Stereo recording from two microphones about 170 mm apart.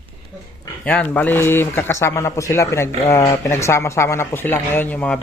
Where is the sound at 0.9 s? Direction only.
10° left (ahead or behind).